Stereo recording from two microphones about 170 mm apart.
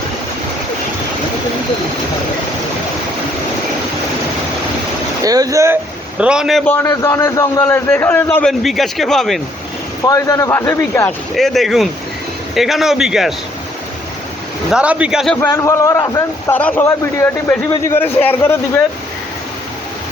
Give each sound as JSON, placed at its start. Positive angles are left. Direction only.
{"t": 5.2, "sound": "a man's voice", "side_deg": -20}
{"t": 6.8, "sound": "a man's voice", "side_deg": 20}
{"t": 10.1, "sound": "a man's voice", "side_deg": 20}
{"t": 11.3, "sound": "a man's voice", "side_deg": 0}
{"t": 14.7, "sound": "a man's voice", "side_deg": -5}
{"t": 15.4, "sound": "a man's voice", "side_deg": 15}